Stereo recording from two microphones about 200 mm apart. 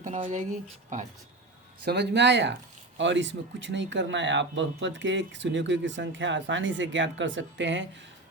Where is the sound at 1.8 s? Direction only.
55° right (ahead or behind).